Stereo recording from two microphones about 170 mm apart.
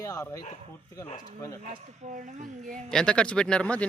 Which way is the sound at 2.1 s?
45° right (ahead or behind).